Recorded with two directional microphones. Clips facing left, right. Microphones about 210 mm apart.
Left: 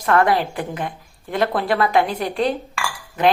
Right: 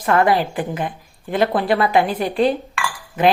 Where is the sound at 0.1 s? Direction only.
Centre (ahead or behind).